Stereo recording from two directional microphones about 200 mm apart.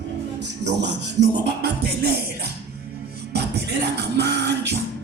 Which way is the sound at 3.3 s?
55° right (ahead or behind).